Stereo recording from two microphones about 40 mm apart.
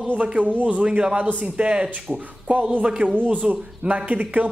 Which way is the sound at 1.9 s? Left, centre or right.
Right.